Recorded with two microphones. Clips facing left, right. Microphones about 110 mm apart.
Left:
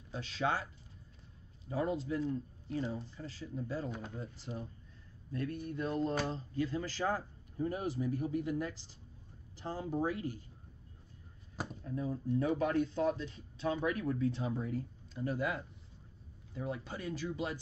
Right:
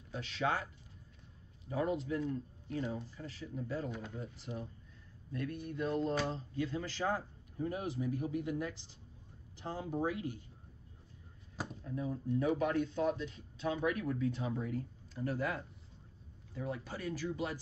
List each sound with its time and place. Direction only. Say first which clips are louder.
0.1 s speech: even; 30° left (ahead or behind)
1.7 s speech: even; 30° left (ahead or behind)
10.0 s speech: left 1 dB; 40° left (ahead or behind)
12.4 s speech: left 1 dB; 35° left (ahead or behind)
15.2 s speech: left 1 dB; 15° left (ahead or behind)